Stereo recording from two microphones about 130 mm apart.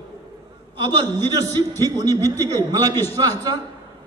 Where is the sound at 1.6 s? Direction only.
25° right (ahead or behind).